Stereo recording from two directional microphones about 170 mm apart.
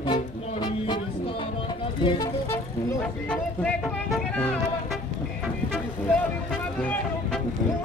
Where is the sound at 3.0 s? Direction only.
5° left (ahead or behind).